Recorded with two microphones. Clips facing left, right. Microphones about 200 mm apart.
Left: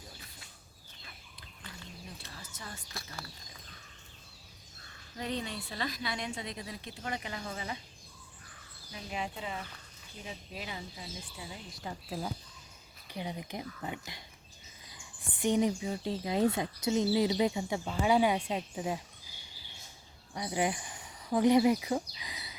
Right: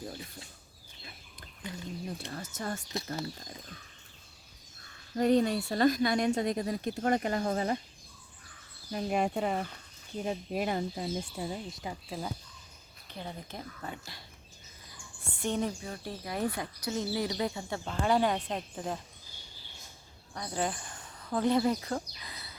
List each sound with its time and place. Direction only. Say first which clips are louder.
2.4 s a woman's voice: right 11 dB; 45° right (ahead or behind)
5.1 s a woman's voice: right 12 dB; 45° right (ahead or behind)
8.9 s a woman's voice: right 9 dB; 50° right (ahead or behind)
11.7 s speech: right 2 dB; 15° right (ahead or behind)
12.0 s speech: left 1 dB; centre (ahead or behind)
13.1 s speech: left 3 dB; 10° left (ahead or behind)
20.3 s speech: left 2 dB; 15° left (ahead or behind)